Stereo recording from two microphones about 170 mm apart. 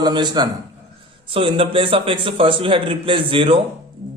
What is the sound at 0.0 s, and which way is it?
A man's voice, 25° right (ahead or behind).